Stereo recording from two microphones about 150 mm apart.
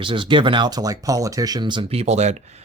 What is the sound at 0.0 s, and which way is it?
Speech, 35° right (ahead or behind).